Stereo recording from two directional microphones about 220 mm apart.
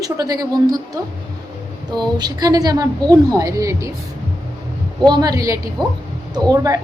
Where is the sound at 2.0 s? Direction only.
20° right (ahead or behind).